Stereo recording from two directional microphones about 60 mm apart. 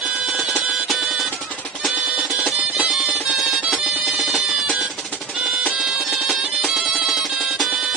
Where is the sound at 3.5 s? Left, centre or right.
Centre.